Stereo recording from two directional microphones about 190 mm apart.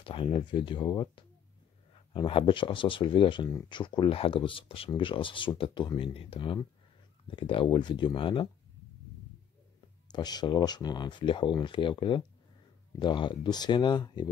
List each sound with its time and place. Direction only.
0.0 s speech: 25° left (ahead or behind)
10.1 s speech: 20° left (ahead or behind)